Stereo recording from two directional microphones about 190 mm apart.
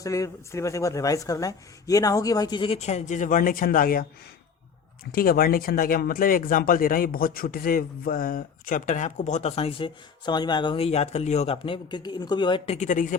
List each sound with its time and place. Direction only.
0.0 s speech: 15° left (ahead or behind); by 4.0 s 50° left (ahead or behind)
5.1 s speech: 50° left (ahead or behind)